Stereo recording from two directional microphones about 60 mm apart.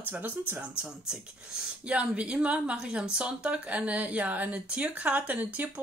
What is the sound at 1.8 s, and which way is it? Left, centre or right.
Speech, right.